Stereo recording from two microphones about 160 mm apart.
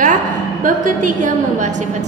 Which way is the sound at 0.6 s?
55° right (ahead or behind).